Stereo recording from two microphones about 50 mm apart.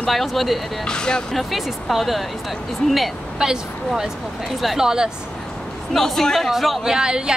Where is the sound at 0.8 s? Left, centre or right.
Centre.